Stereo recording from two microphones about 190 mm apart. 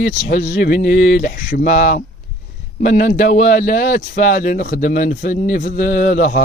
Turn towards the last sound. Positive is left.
turn(degrees=40)  # may be behind; listen again after turning